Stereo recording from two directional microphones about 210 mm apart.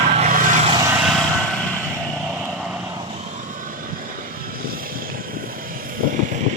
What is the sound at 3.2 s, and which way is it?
Vehicle, 35° right (ahead or behind).